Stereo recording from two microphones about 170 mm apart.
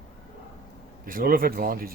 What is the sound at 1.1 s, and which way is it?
Speech, 60° right (ahead or behind).